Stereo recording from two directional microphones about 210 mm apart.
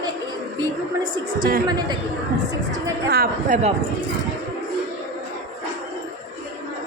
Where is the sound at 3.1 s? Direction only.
45° right (ahead or behind).